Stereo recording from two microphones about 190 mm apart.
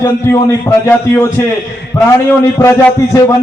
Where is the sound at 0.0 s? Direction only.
15° left (ahead or behind).